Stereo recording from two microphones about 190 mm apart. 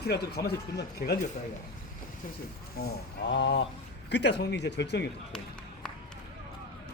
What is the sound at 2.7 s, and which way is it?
Speech, 60° left (ahead or behind).